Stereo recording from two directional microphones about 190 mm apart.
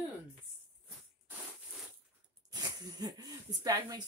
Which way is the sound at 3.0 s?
20° right (ahead or behind).